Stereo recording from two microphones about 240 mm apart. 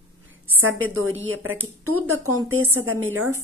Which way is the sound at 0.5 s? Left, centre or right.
Right.